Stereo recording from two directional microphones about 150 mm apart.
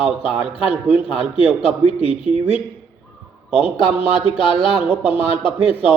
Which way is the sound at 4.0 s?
35° left (ahead or behind).